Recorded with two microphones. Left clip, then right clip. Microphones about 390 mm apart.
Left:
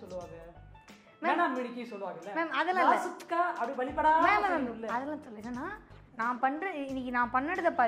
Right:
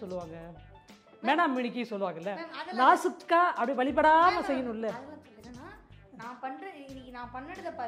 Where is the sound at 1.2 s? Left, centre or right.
Right.